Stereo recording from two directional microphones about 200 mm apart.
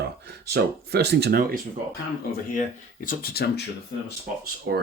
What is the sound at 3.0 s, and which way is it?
Speech, 50° left (ahead or behind).